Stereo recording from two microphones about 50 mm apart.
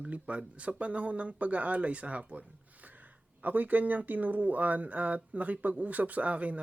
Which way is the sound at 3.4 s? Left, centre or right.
Right.